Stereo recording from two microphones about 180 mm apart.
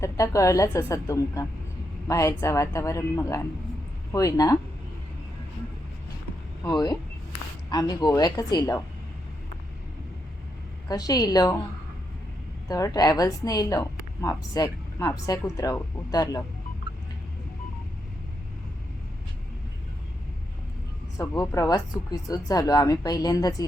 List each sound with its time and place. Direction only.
0.0 s a woman's voice: 15° left (ahead or behind)
6.7 s a woman's voice: 20° left (ahead or behind)
10.8 s a woman's voice: 20° left (ahead or behind)
12.6 s a woman's voice: 20° left (ahead or behind)
21.2 s a woman's voice: 20° left (ahead or behind)